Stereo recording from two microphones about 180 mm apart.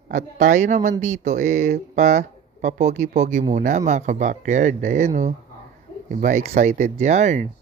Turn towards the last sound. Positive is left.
turn(degrees=-40)  # may be behind; listen again after turning